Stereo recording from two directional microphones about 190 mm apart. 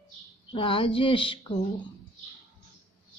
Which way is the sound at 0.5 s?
25° left (ahead or behind).